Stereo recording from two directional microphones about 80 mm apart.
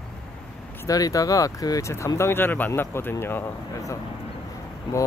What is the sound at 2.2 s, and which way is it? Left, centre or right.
Speech, left.